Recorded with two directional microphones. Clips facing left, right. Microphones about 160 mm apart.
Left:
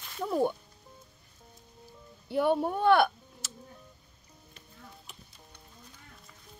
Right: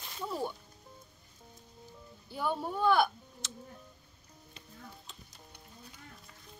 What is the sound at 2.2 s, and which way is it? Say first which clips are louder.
Speech: left 8 dB; 65° left (ahead or behind).